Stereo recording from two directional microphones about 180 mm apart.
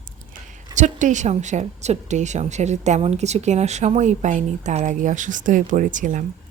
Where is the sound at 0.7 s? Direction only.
40° right (ahead or behind).